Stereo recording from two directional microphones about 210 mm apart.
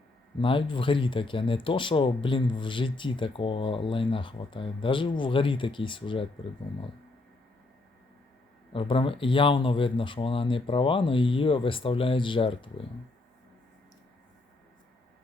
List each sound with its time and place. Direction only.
0.3 s speech: 25° left (ahead or behind)
8.7 s speech: 25° left (ahead or behind)